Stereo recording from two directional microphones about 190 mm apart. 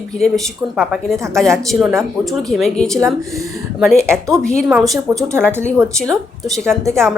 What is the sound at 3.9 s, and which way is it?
Speech, 15° right (ahead or behind).